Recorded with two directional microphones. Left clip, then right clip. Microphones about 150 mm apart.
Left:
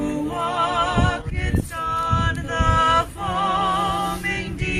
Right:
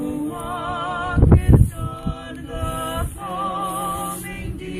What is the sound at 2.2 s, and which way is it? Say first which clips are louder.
Mantra: left 8 dB; 30° left (ahead or behind).